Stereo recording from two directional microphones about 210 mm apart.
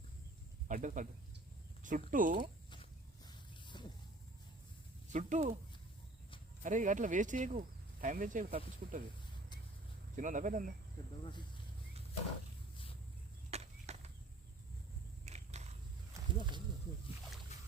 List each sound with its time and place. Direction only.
0.7 s speech: 40° right (ahead or behind)
3.2 s vehicle: 20° left (ahead or behind)
5.1 s speech: 35° right (ahead or behind)
6.6 s speech: 35° right (ahead or behind)
10.2 s speech: 40° right (ahead or behind)
13.5 s a sound: 30° right (ahead or behind)
15.2 s a sound: 30° right (ahead or behind)
16.1 s a sound: 20° right (ahead or behind)
17.5 s boat: 30° left (ahead or behind)